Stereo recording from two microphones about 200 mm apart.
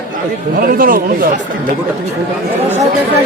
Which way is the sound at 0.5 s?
45° right (ahead or behind).